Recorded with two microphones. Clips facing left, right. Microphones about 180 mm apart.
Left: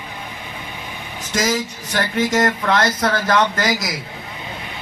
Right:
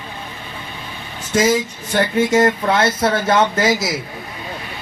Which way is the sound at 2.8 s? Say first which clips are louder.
Right 2 dB; 25° right (ahead or behind).